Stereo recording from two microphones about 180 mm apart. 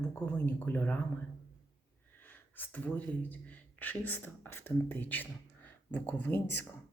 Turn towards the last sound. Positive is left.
turn(degrees=10)  # may be behind; listen again after turning